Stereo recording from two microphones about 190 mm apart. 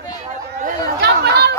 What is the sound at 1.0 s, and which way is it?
Chatter, 60° right (ahead or behind).